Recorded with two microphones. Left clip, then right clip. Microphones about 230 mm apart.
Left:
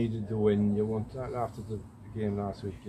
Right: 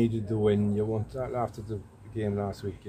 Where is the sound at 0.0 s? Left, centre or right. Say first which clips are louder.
Right 2 dB; right.